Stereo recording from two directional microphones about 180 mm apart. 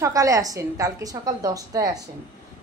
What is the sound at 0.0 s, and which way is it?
A woman's voice, 15° right (ahead or behind).